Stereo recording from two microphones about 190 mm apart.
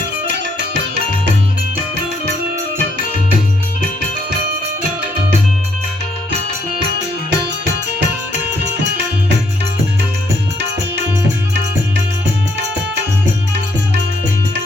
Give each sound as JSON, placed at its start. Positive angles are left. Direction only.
{"t": 7.3, "sound": "music", "side_deg": -65}